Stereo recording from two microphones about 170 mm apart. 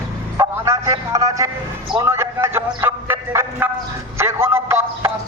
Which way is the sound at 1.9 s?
15° right (ahead or behind).